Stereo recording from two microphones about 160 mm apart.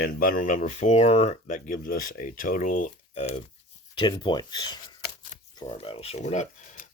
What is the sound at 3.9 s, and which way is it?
Speech, 30° left (ahead or behind).